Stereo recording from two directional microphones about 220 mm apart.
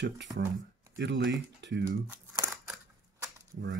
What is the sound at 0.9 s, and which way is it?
Speech, 50° right (ahead or behind).